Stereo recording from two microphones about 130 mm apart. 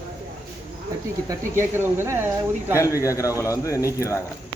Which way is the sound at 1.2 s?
20° right (ahead or behind).